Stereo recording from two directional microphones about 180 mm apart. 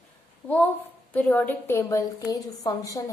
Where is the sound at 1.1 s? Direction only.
10° left (ahead or behind).